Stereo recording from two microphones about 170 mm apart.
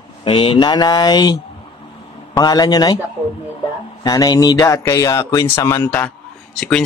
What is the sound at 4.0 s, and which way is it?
Speech, 20° left (ahead or behind).